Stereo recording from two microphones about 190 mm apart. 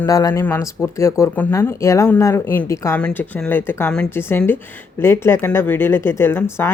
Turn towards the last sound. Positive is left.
turn(degrees=15)  # may be behind; listen again after turning